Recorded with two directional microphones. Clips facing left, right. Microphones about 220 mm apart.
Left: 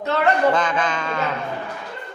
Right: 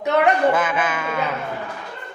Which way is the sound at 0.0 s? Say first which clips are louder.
Right 1 dB; 15° right (ahead or behind).